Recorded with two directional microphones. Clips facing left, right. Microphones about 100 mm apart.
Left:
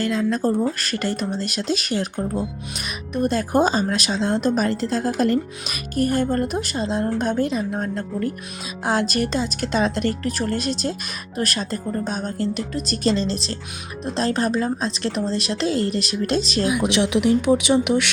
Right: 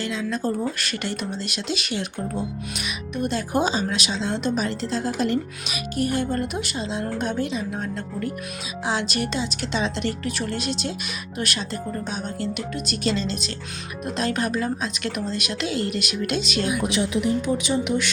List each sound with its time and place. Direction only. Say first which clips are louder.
0.0 s speech: left 5 dB; 45° left (ahead or behind)
16.9 s speech: left 4 dB; 75° left (ahead or behind)